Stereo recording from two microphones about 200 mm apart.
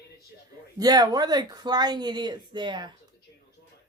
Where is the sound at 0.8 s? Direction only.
20° right (ahead or behind).